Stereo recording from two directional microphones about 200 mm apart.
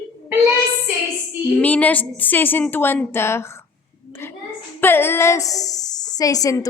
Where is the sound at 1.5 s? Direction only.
10° left (ahead or behind).